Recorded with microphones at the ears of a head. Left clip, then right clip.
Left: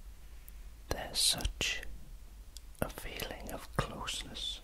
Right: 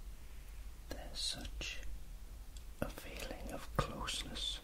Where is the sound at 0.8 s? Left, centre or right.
Left.